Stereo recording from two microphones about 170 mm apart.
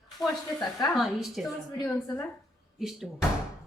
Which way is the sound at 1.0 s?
Centre (ahead or behind).